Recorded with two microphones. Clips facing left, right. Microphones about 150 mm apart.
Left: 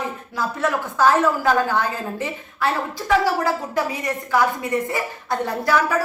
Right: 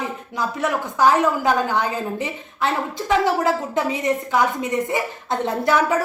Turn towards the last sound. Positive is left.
turn(degrees=-20)  # may be behind; listen again after turning